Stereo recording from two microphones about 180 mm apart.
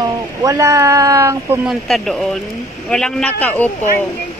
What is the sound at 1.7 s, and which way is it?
A man's voice, centre (ahead or behind).